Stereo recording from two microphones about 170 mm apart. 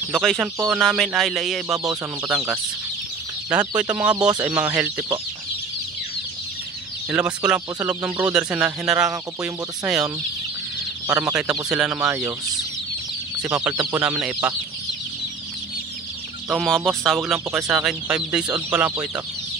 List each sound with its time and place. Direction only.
0.2 s chicken: centre (ahead or behind)
2.3 s speech: 10° right (ahead or behind)
4.1 s speech: 25° right (ahead or behind)
4.5 s speech: 10° right (ahead or behind)
7.1 s speech: 5° right (ahead or behind)
11.1 s speech: 10° right (ahead or behind)
13.7 s speech: 15° right (ahead or behind)
16.4 s chicken: centre (ahead or behind)
18.7 s speech: 10° right (ahead or behind)